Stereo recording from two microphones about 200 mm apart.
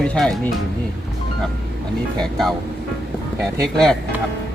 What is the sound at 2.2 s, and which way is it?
Speech, centre (ahead or behind).